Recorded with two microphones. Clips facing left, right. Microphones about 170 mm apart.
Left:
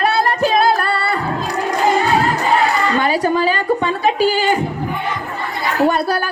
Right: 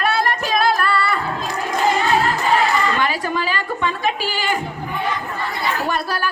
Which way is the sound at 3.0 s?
35° left (ahead or behind).